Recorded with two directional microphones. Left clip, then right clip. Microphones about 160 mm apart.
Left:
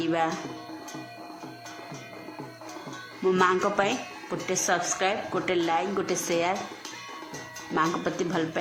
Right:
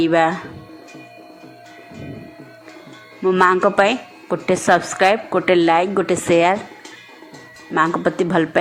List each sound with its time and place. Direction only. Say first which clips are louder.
0.0 s speech: right 11 dB; 30° right (ahead or behind)
3.4 s speech: right 11 dB; 35° right (ahead or behind)
7.7 s speech: right 9 dB; 25° right (ahead or behind)